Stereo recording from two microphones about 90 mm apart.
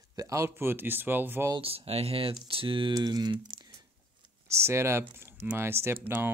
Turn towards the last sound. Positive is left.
turn(degrees=-25)  # may be behind; listen again after turning